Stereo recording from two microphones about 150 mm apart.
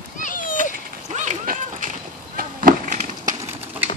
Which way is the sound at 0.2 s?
60° left (ahead or behind).